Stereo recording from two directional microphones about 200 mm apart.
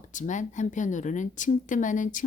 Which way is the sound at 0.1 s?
40° left (ahead or behind).